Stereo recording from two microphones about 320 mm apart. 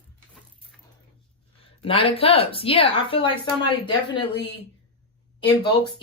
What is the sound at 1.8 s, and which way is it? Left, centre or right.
Speech, centre.